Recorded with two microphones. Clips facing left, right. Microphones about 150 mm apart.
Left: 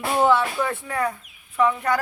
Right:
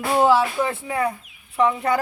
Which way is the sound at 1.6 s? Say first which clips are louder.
Right 1 dB; 30° right (ahead or behind).